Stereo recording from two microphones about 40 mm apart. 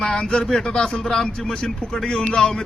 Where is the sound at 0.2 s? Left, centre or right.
Left.